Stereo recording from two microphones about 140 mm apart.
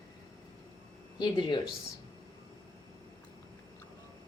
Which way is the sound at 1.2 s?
30° left (ahead or behind).